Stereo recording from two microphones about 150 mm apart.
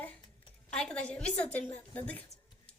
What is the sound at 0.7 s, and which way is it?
Speech, 5° left (ahead or behind).